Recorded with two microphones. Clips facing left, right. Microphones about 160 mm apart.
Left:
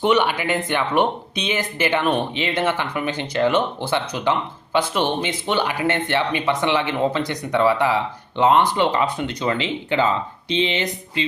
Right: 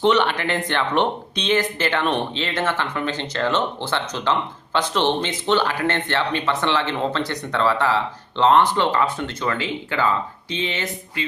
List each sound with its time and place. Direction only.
0.0 s speech: 10° left (ahead or behind)